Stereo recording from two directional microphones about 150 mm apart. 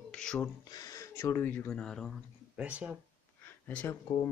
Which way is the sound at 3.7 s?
10° left (ahead or behind).